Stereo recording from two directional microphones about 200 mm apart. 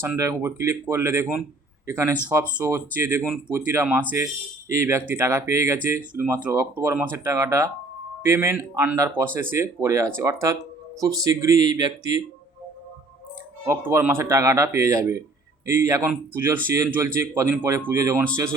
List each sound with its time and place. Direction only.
0.0 s speech: 15° right (ahead or behind)
13.7 s speech: 10° right (ahead or behind)